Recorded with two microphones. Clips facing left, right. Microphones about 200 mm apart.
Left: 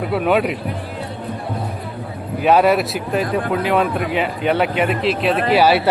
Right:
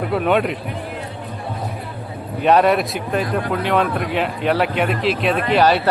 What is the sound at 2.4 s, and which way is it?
Speech, 5° left (ahead or behind).